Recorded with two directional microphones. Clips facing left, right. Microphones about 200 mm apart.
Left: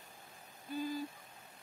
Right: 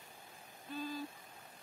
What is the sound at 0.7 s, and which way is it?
Owl, 15° left (ahead or behind).